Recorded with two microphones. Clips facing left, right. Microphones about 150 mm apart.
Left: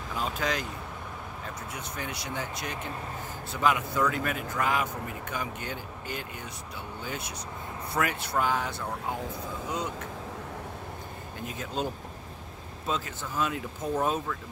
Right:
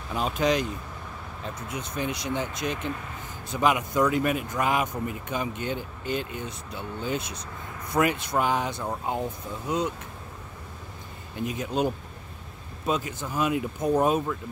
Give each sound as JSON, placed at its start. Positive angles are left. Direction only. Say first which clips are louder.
{"t": 0.1, "sound": "speech", "louder": "right 6 dB", "side_deg": -20}
{"t": 11.4, "sound": "speech", "louder": "right 6 dB", "side_deg": -15}